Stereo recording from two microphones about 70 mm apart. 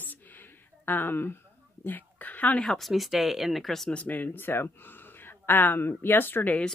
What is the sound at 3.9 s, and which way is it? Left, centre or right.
Speech, left.